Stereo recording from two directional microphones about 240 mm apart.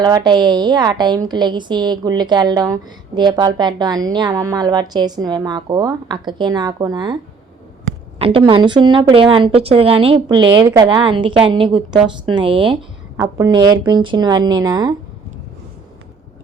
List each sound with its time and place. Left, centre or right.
0.0 s a woman's voice: centre
8.2 s a woman's voice: right